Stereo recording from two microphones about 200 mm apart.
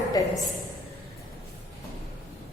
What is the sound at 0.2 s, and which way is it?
Speech, 15° left (ahead or behind).